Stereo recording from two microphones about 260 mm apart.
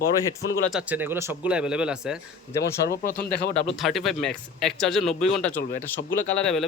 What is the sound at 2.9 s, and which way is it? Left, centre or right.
Speech, left.